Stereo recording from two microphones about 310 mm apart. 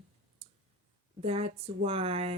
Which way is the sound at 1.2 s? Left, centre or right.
Centre.